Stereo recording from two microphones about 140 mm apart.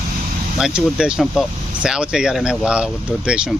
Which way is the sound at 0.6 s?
5° right (ahead or behind).